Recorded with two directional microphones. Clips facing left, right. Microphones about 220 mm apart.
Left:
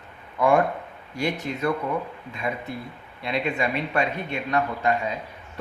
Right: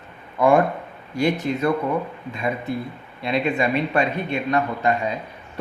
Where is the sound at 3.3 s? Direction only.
30° right (ahead or behind).